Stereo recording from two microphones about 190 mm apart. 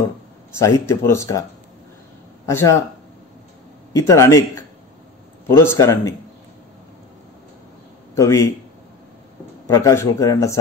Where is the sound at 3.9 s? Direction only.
15° left (ahead or behind).